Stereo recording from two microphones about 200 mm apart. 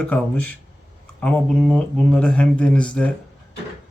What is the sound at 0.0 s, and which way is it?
A man's voice, 5° left (ahead or behind).